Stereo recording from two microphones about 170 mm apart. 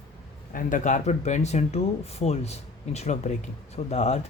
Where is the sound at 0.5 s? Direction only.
50° left (ahead or behind).